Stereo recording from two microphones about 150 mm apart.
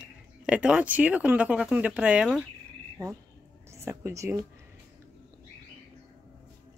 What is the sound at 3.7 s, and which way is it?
Speech, 20° right (ahead or behind).